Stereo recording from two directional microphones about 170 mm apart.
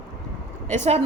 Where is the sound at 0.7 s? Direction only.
40° right (ahead or behind).